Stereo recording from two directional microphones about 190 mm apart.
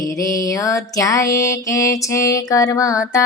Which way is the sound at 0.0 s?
15° left (ahead or behind).